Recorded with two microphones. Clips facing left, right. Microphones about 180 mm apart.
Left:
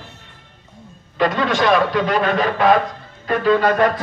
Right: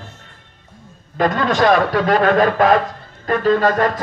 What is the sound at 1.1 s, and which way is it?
A man's voice, 45° right (ahead or behind).